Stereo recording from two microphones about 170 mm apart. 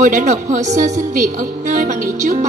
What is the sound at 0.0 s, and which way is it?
Speech, 45° right (ahead or behind).